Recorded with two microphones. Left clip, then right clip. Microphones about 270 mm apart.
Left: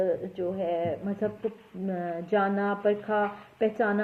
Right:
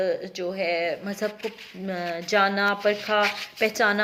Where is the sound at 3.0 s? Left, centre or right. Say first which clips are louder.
Right 5 dB; right.